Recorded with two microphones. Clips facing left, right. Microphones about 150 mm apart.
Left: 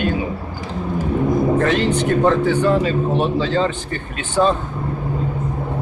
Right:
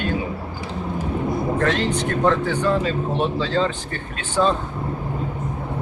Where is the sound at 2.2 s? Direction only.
15° left (ahead or behind).